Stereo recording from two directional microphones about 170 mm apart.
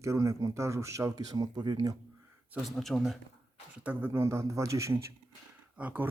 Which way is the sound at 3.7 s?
10° right (ahead or behind).